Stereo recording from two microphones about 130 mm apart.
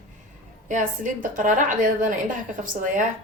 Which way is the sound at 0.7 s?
80° right.